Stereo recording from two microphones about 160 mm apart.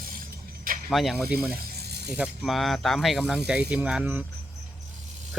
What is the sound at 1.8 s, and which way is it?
Ratchet, 90° right.